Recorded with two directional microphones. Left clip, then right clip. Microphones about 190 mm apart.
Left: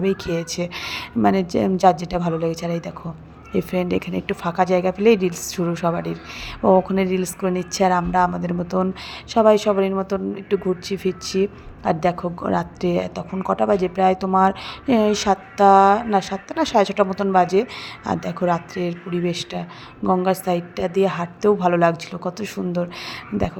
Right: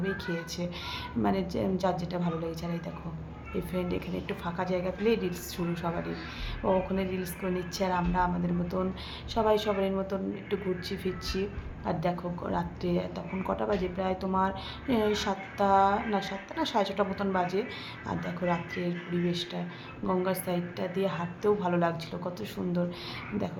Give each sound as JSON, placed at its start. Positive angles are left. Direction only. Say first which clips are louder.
{"t": 0.0, "sound": "speech", "louder": "left 11 dB", "side_deg": 45}